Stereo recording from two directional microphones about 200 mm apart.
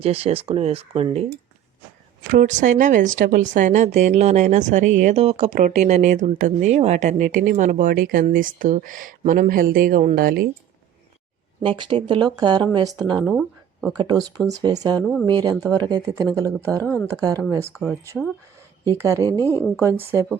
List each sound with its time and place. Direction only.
0.0 s speech: 30° right (ahead or behind)
2.3 s a woman's voice: 40° right (ahead or behind)
11.6 s speech: 25° right (ahead or behind)
15.0 s a woman's voice: 5° left (ahead or behind)
15.3 s speech: 20° right (ahead or behind)
15.5 s a woman's voice: centre (ahead or behind)
15.8 s speech: 20° right (ahead or behind)
16.8 s a woman's voice: 10° left (ahead or behind)
17.2 s speech: 15° right (ahead or behind)
18.9 s speech: 15° right (ahead or behind)
19.3 s a woman's voice: 10° left (ahead or behind)
19.8 s speech: 15° right (ahead or behind)